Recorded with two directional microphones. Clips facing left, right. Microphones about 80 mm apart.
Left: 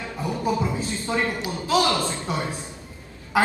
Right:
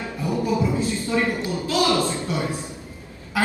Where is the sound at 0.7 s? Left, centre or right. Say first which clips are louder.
Right 3 dB; left.